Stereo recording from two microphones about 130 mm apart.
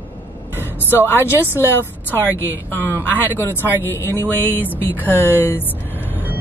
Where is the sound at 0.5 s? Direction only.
15° left (ahead or behind).